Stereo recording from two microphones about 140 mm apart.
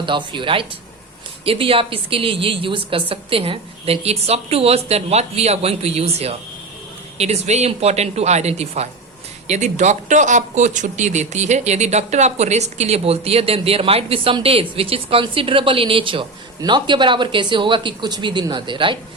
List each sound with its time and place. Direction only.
0.0 s speech: 35° right (ahead or behind)